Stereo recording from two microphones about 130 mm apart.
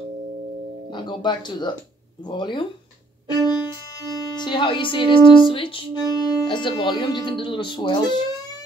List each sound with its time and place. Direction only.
0.8 s speech: 35° left (ahead or behind)
6.0 s speech: 30° left (ahead or behind)